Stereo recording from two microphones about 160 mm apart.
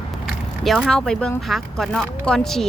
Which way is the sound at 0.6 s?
Centre (ahead or behind).